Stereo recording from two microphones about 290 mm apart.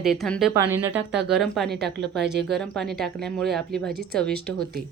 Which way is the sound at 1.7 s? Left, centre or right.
Right.